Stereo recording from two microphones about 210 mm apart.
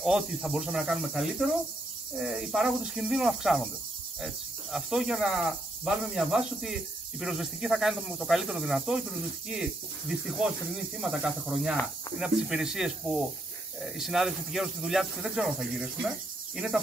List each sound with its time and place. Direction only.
0.0 s speech: centre (ahead or behind)